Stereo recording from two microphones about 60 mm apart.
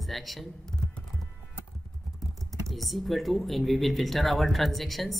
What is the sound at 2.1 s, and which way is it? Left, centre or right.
Speech, centre.